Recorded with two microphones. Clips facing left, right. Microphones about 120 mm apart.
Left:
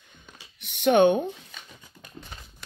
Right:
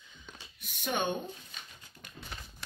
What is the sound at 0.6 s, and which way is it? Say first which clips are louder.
Speech: left 15 dB; 75° left (ahead or behind).